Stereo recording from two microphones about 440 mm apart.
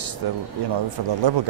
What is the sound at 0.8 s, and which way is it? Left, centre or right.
Speech, right.